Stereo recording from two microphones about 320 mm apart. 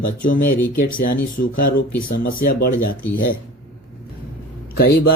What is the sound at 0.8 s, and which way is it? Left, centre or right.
Speech, left.